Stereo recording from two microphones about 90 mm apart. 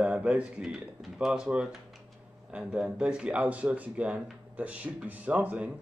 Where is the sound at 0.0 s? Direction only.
15° right (ahead or behind).